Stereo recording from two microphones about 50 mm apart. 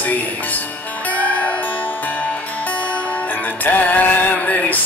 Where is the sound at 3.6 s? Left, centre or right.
Left.